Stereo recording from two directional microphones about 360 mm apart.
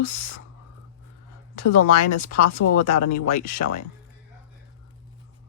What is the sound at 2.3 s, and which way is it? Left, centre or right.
Speech, left.